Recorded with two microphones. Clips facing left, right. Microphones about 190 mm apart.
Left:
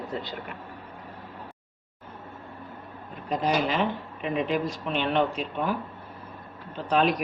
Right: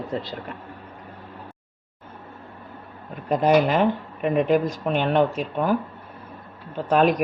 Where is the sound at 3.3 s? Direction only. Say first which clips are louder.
Right 7 dB; 55° right (ahead or behind).